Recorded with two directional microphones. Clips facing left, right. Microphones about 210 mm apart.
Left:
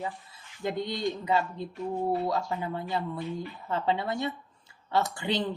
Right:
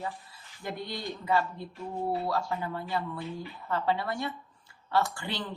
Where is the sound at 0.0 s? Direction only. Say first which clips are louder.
Left 2 dB; 20° left (ahead or behind).